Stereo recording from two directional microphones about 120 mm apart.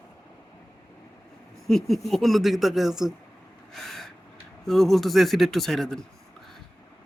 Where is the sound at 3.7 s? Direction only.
Centre (ahead or behind).